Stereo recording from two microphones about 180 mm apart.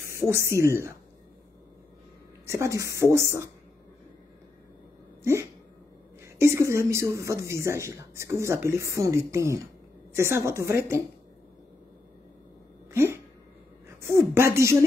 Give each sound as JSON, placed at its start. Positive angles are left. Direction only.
{"t": 0.1, "sound": "speech", "side_deg": -15}
{"t": 2.4, "sound": "speech", "side_deg": -15}
{"t": 5.2, "sound": "a sound", "side_deg": -15}
{"t": 6.2, "sound": "speech", "side_deg": -15}
{"t": 12.9, "sound": "a sound", "side_deg": -15}
{"t": 13.8, "sound": "a woman's voice", "side_deg": -15}